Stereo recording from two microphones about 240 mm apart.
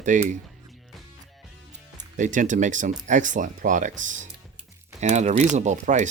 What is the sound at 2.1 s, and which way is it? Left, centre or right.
Speech, right.